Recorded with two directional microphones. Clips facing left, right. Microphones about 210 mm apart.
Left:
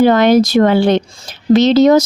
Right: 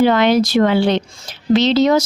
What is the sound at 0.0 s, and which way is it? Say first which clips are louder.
Speech: left 4 dB; 45° left (ahead or behind).